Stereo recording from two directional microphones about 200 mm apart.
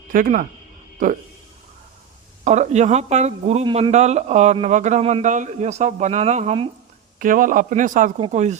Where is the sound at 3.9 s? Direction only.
35° right (ahead or behind).